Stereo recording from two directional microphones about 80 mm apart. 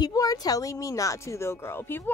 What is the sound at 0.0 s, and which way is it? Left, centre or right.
Speech, left.